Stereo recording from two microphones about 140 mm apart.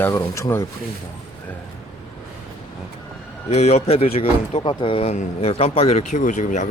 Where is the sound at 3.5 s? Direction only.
50° left (ahead or behind).